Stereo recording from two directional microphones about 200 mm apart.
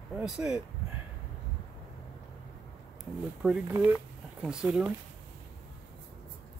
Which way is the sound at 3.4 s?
5° right (ahead or behind).